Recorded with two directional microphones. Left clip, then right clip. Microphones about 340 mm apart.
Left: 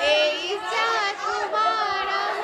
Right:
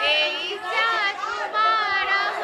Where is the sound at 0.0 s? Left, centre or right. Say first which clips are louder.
Left 1 dB; centre.